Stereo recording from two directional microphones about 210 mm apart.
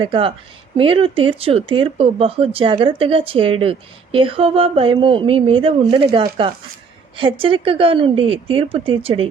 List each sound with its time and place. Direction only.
0.0 s speech: 25° right (ahead or behind)